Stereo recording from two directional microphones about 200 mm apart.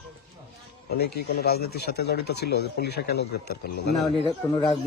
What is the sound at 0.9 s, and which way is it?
Speech, 50° left (ahead or behind).